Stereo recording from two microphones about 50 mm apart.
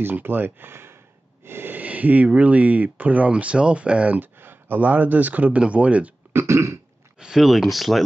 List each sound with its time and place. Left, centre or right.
0.0 s speech: right
1.4 s snort: right
1.8 s speech: right
4.2 s speech: right
6.3 s throat clearing: right
7.2 s speech: centre